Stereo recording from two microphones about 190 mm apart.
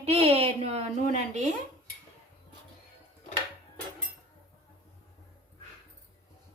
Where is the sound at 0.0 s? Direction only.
30° right (ahead or behind).